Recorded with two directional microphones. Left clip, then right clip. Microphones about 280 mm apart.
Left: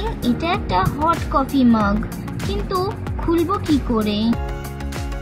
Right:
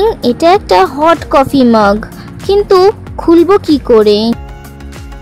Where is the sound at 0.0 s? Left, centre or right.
Right.